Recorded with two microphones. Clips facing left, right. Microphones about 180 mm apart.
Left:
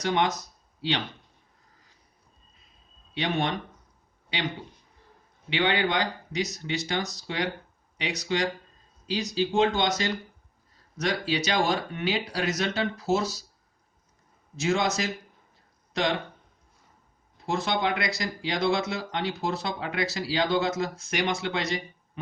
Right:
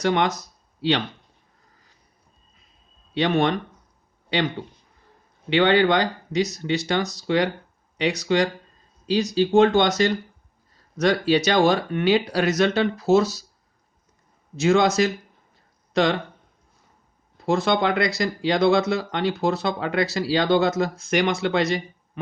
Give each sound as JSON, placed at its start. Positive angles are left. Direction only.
{"t": 0.0, "sound": "speech", "side_deg": -65}
{"t": 3.2, "sound": "speech", "side_deg": -60}
{"t": 5.5, "sound": "speech", "side_deg": -60}
{"t": 14.5, "sound": "speech", "side_deg": -70}
{"t": 17.4, "sound": "speech", "side_deg": -65}